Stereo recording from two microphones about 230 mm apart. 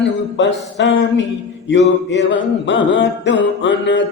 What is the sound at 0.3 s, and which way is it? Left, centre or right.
Music, left.